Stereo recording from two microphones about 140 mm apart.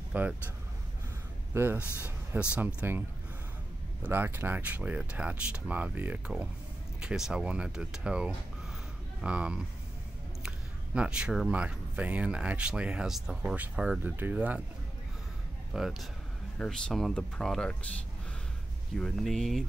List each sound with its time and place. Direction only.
0.1 s speech: 10° right (ahead or behind)
1.5 s speech: 15° right (ahead or behind)
4.0 s speech: 15° right (ahead or behind)
11.0 s speech: 5° right (ahead or behind)
15.7 s speech: centre (ahead or behind)
18.9 s speech: 5° left (ahead or behind)